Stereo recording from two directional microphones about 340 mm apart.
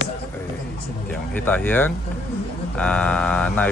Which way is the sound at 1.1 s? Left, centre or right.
Centre.